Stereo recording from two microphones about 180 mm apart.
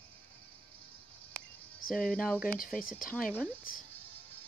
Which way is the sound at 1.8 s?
50° left (ahead or behind).